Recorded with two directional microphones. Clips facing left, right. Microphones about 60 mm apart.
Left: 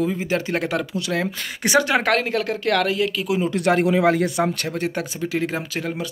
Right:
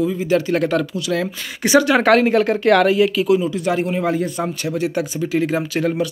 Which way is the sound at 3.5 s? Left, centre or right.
Left.